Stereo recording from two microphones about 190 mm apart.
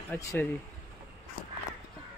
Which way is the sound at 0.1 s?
10° left (ahead or behind).